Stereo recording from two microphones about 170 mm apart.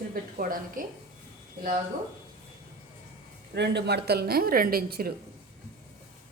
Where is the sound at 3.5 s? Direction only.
80° right; by 5.1 s 60° right (ahead or behind).